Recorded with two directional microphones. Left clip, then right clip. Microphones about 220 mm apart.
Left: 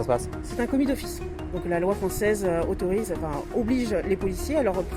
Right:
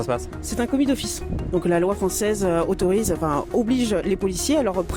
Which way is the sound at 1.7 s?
45° right (ahead or behind).